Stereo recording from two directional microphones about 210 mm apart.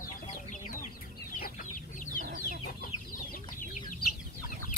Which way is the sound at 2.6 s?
40° left (ahead or behind).